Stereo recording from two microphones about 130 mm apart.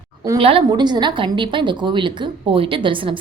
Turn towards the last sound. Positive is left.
turn(degrees=-40)  # may be behind; listen again after turning